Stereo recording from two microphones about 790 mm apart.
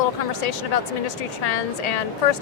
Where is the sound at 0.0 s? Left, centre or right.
Left.